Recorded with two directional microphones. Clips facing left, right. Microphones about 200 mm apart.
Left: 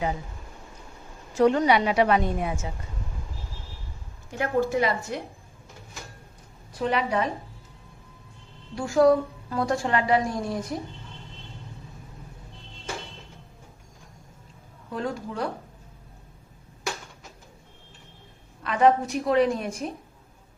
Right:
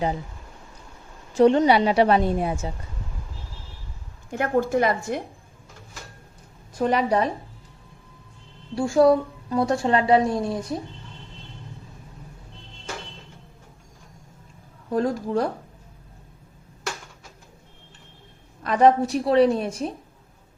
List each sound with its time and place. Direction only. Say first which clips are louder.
1.3 s a woman's voice: right 4 dB; 30° right (ahead or behind)
4.3 s a woman's voice: right 2 dB; 50° right (ahead or behind)
6.7 s a woman's voice: right 4 dB; 45° right (ahead or behind)
8.7 s a woman's voice: right 2 dB; 25° right (ahead or behind)
14.9 s a woman's voice: right 7 dB; 40° right (ahead or behind)
18.6 s a woman's voice: right 3 dB; 40° right (ahead or behind)